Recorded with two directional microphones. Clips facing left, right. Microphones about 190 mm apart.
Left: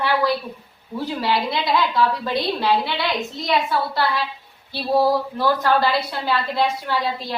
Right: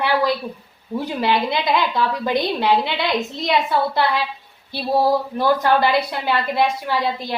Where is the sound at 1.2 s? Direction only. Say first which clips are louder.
Right 2 dB; 20° right (ahead or behind).